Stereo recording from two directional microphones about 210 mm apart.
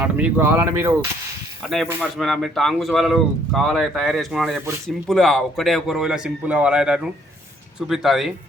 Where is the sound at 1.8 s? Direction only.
10° right (ahead or behind).